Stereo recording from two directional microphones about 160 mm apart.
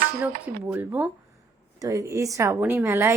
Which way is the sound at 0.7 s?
10° right (ahead or behind).